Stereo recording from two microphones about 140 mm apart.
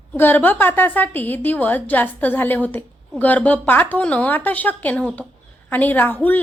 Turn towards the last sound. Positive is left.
turn(degrees=15)  # may be behind; listen again after turning